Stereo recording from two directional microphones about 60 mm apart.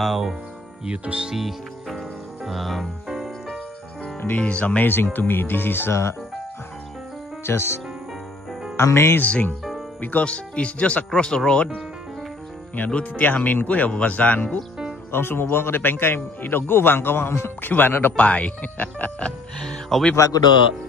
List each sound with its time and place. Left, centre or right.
0.0 s music: centre
1.3 s music: centre
4.4 s a man's voice: left
7.4 s speech: left
9.2 s speech: left
12.7 s speech: left
15.0 s a man's voice: left
18.1 s speech: left
19.6 s speech: centre
20.2 s a man's voice: left